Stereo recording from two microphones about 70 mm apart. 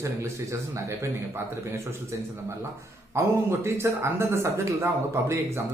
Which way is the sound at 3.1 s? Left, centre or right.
Right.